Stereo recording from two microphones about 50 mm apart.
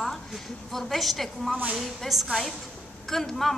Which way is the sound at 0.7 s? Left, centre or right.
Centre.